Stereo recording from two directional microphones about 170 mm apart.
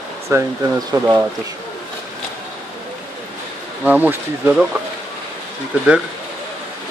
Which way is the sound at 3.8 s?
10° right (ahead or behind).